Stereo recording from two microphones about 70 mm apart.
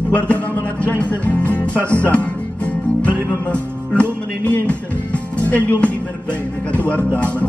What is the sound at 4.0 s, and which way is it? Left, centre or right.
Music, left.